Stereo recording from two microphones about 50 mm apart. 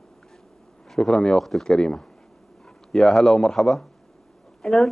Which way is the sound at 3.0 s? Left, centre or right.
Centre.